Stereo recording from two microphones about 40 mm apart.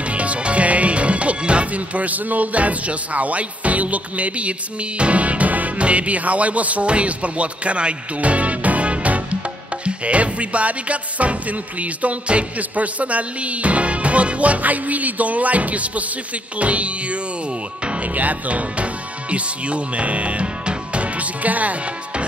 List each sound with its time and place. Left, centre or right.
0.0 s music: right
19.3 s speech: right